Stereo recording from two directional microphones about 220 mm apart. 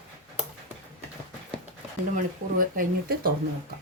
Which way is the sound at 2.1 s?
40° right (ahead or behind).